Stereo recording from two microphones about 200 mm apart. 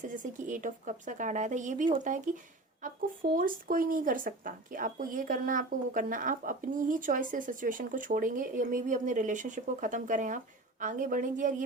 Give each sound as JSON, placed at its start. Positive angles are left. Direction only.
{"t": 0.2, "sound": "speech", "side_deg": -40}
{"t": 3.3, "sound": "speech", "side_deg": -45}